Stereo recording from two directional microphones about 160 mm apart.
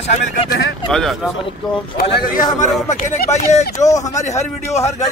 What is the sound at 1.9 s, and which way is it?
A man's voice, 55° left (ahead or behind).